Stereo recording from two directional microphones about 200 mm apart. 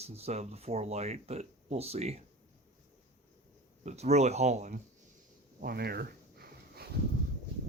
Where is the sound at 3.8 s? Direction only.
35° right (ahead or behind).